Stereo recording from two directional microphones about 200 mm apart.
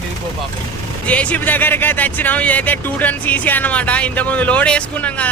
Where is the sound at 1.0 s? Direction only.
5° left (ahead or behind).